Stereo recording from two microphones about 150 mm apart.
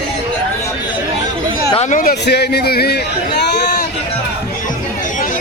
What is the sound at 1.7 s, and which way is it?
Speech, 50° left (ahead or behind).